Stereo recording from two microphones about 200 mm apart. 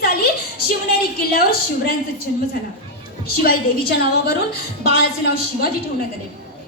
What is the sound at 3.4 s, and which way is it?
Speech, 50° left (ahead or behind).